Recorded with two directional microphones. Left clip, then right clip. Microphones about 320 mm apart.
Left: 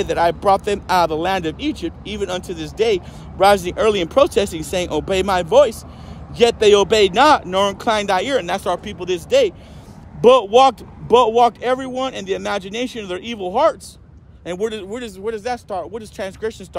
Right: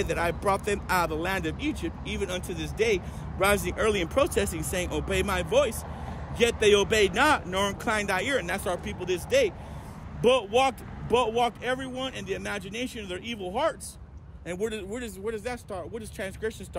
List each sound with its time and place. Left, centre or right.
0.0 s speech: centre